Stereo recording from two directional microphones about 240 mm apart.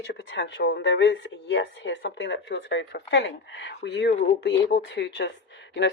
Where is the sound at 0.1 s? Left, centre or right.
Left.